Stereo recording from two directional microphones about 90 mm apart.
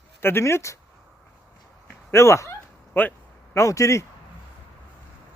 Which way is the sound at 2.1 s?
30° left (ahead or behind).